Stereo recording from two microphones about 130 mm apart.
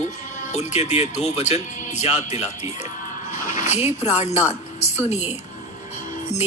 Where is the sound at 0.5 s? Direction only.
60° left (ahead or behind).